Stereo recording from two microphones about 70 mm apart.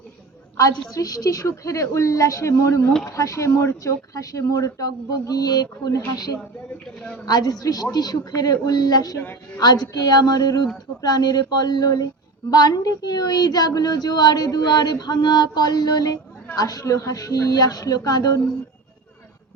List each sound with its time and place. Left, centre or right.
0.5 s a woman's voice: left
6.8 s a woman's voice: centre
7.3 s a woman's voice: left